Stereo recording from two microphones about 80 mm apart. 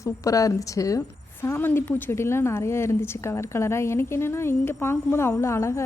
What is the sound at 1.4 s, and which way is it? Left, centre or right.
A woman's voice, left.